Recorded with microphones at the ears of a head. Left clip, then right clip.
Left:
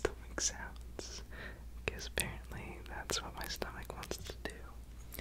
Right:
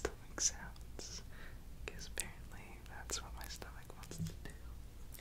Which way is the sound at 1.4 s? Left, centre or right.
Left.